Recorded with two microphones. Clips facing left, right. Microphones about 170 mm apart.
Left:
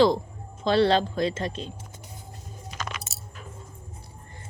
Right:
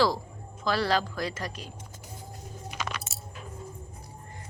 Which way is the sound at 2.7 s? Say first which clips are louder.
Even; 5° right (ahead or behind).